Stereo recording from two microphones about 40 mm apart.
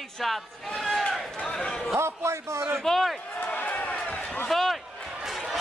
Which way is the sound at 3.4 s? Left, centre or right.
Left.